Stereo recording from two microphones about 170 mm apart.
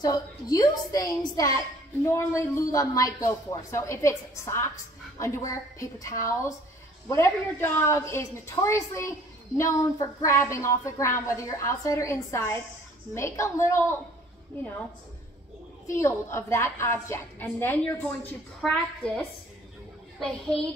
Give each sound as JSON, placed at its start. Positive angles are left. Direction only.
{"t": 0.0, "sound": "a woman's voice", "side_deg": 20}
{"t": 16.0, "sound": "a woman's voice", "side_deg": 15}